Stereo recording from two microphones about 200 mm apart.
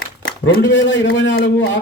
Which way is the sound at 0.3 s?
55° left (ahead or behind).